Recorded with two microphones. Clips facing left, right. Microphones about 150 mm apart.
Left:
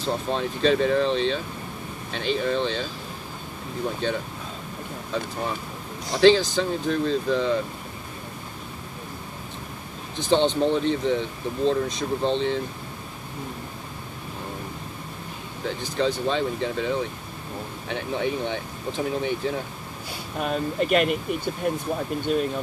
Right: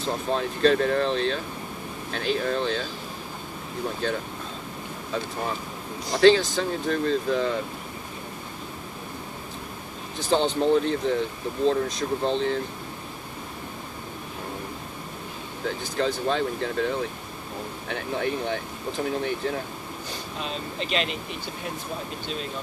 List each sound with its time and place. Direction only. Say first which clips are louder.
0.0 s speech: even; centre (ahead or behind)
4.0 s speech: left 1 dB; centre (ahead or behind)
6.1 s speech: left 1 dB; centre (ahead or behind)
10.1 s speech: left 2 dB; centre (ahead or behind)
15.6 s speech: left 1 dB; centre (ahead or behind)
20.3 s speech: left 9 dB; 55° left (ahead or behind)